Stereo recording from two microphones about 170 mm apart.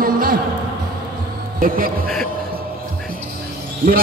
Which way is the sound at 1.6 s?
55° right (ahead or behind).